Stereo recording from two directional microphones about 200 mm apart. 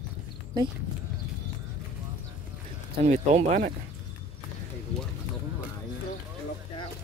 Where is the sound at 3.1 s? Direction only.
35° right (ahead or behind).